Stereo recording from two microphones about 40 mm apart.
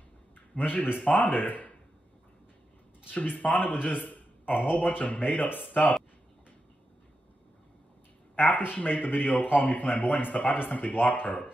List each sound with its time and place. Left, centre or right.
0.6 s a man's voice: left
3.1 s a man's voice: left
8.4 s a man's voice: left